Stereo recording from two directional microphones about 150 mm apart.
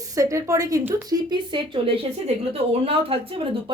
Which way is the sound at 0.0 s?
20° right (ahead or behind).